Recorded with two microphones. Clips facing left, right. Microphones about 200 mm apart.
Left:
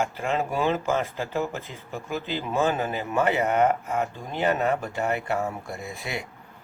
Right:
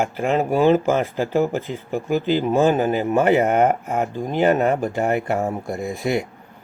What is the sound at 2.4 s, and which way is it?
Speech, 45° right (ahead or behind).